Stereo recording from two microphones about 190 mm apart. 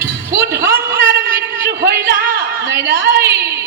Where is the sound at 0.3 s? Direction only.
65° right (ahead or behind).